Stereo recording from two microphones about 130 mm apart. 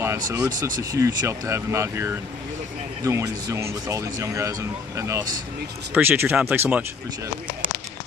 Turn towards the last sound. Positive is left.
turn(degrees=-15)  # may be behind; listen again after turning